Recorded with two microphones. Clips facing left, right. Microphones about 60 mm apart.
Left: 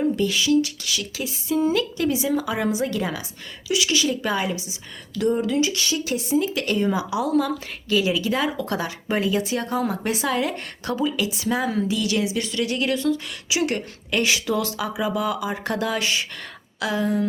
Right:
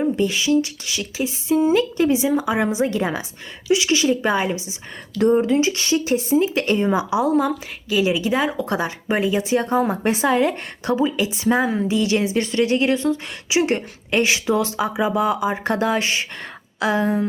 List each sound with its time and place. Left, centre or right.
0.0 s speech: right